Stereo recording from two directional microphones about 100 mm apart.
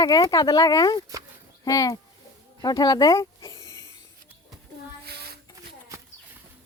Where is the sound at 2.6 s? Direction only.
45° left (ahead or behind).